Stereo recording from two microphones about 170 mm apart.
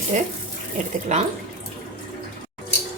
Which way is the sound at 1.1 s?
45° right (ahead or behind).